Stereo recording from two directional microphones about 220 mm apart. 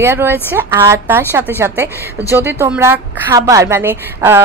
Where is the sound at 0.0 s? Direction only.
10° right (ahead or behind).